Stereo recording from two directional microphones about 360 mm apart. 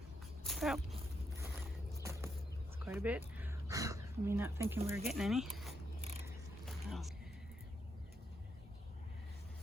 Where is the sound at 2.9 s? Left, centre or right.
Centre.